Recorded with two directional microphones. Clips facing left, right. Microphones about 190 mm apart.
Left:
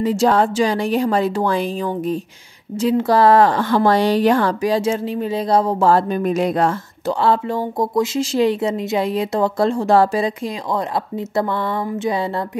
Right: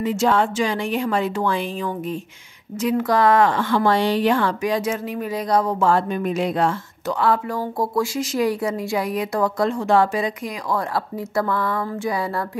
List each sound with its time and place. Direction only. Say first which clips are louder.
0.0 s a woman's voice: left 3 dB; 35° left (ahead or behind)
7.1 s speech: left 3 dB; 30° left (ahead or behind)
10.7 s speech: left 1 dB; 25° left (ahead or behind)